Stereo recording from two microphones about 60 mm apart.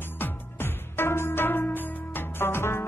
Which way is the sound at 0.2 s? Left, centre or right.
Left.